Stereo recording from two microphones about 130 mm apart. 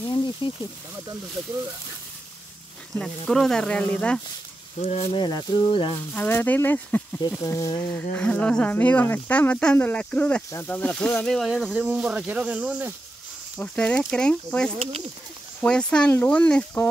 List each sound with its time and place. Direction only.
0.0 s snake: 40° left (ahead or behind)
3.0 s speech: 5° left (ahead or behind)
4.8 s speech: 55° left (ahead or behind)
5.1 s speech: 35° left (ahead or behind)
6.1 s speech: 15° left (ahead or behind)
7.9 s speech: 10° left (ahead or behind); by 12.9 s 10° right (ahead or behind)
13.6 s speech: 10° left (ahead or behind)
14.8 s speech: 55° right (ahead or behind)
15.6 s speech: 5° left (ahead or behind)